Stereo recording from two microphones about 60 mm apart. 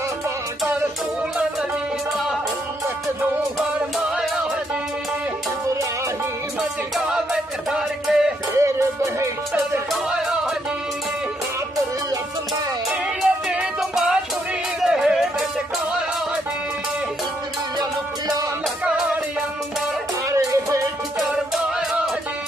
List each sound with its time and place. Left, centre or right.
7.1 s music: centre
8.5 s music: right
13.2 s music: centre
14.8 s a sound: centre
20.2 s music: right